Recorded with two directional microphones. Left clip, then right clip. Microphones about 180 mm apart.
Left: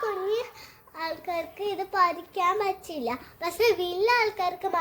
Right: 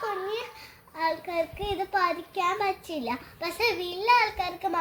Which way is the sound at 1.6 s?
20° left (ahead or behind).